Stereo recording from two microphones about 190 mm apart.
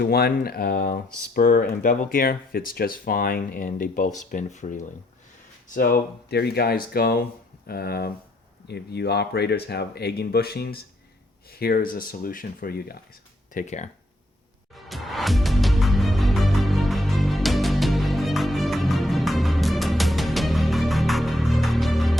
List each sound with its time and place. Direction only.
0.0 s speech: 55° left (ahead or behind)
13.5 s speech: 40° left (ahead or behind)
14.8 s music: centre (ahead or behind)